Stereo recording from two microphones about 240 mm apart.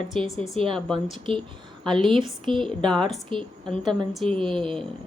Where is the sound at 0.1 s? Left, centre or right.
Right.